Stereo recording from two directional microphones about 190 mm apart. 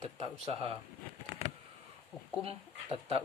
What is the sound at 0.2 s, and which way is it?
Speech, 30° right (ahead or behind).